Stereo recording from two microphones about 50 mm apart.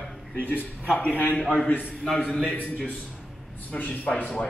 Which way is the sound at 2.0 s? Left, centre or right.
Centre.